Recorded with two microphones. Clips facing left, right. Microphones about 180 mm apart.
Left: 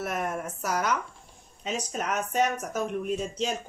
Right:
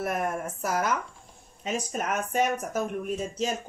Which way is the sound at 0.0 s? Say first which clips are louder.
Right 2 dB; 50° right (ahead or behind).